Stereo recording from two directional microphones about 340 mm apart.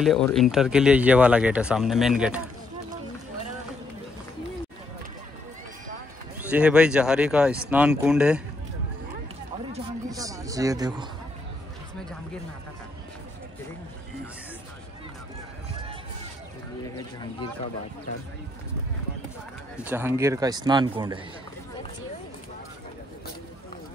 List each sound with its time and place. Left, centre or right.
0.0 s speech: centre
6.5 s speech: centre
9.7 s a sound: centre
19.8 s a man's voice: centre